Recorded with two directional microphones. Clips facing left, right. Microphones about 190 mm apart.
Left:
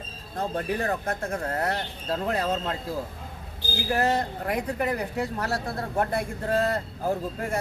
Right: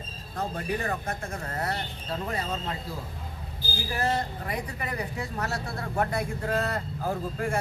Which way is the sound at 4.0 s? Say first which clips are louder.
Left 2 dB; 55° left (ahead or behind).